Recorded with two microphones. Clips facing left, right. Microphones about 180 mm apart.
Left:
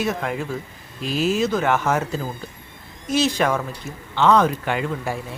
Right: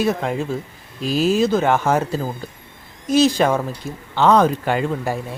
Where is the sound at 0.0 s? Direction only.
25° right (ahead or behind).